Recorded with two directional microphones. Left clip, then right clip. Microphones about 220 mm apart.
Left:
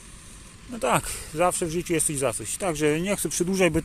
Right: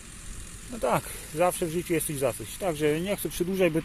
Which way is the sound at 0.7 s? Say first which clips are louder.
Left 3 dB; 20° left (ahead or behind).